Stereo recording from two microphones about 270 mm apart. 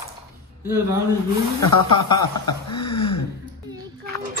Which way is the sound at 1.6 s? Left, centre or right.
Left.